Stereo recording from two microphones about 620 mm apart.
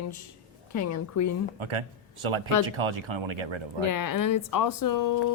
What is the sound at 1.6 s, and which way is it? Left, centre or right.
Speech, right.